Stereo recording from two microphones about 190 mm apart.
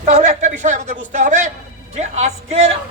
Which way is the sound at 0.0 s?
40° right (ahead or behind).